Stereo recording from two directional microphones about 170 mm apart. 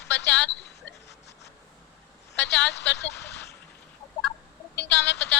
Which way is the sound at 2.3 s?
90° left.